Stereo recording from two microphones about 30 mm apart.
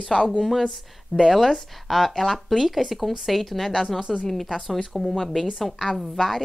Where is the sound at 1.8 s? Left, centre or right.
Centre.